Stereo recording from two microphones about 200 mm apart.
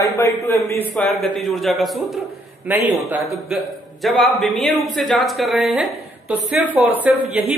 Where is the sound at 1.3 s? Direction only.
Centre (ahead or behind).